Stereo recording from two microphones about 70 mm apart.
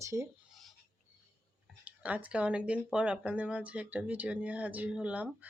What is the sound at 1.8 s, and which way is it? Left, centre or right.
Speech, right.